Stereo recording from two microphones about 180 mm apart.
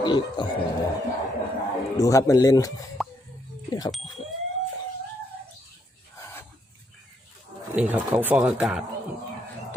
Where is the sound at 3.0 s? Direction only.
Centre (ahead or behind).